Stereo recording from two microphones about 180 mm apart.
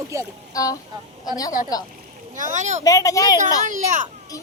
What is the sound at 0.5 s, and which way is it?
Speech, 20° left (ahead or behind).